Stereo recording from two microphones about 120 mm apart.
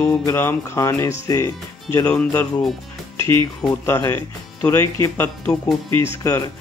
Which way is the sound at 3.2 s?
40° right (ahead or behind).